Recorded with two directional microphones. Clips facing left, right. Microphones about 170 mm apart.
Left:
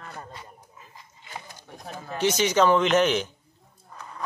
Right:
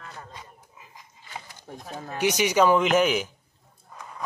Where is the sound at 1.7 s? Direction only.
35° right (ahead or behind).